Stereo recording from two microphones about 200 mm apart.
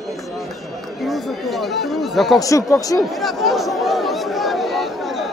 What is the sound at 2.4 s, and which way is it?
Speech, 15° left (ahead or behind).